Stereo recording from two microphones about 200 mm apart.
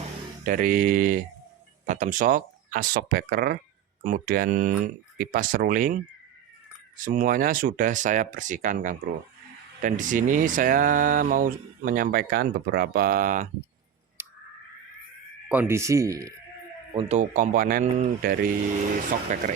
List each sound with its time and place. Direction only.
0.4 s speech: 45° right (ahead or behind)
14.2 s a sound: 10° right (ahead or behind)
15.4 s speech: 10° right (ahead or behind)
16.9 s speech: 30° right (ahead or behind)